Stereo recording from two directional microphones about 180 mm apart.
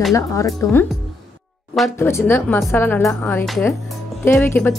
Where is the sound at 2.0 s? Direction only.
15° left (ahead or behind).